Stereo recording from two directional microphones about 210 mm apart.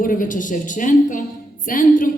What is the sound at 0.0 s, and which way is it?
A woman's voice, 40° left (ahead or behind).